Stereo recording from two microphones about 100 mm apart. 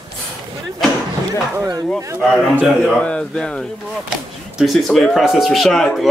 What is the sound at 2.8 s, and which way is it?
Speech, 10° left (ahead or behind).